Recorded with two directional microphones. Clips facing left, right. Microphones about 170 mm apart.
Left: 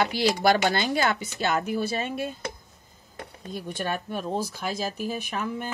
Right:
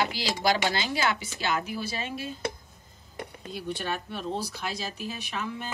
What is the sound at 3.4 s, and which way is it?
Speech, 45° left (ahead or behind).